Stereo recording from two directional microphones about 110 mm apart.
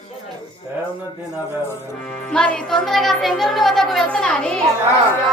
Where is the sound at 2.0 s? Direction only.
5° left (ahead or behind).